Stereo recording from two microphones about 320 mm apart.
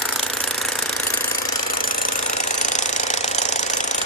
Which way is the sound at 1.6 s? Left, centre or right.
Left.